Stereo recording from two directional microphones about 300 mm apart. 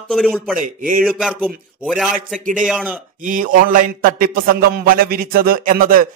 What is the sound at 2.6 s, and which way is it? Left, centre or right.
Speech, centre.